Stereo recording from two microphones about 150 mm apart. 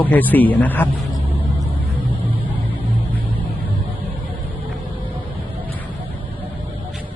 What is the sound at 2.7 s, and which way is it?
Vehicle, 10° left (ahead or behind).